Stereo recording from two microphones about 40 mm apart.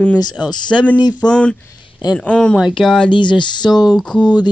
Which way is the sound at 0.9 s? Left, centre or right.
Right.